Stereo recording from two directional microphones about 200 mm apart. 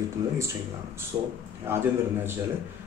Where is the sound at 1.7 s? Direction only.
10° right (ahead or behind).